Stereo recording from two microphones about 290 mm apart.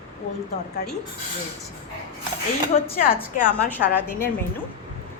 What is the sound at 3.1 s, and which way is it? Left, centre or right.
Speech, left.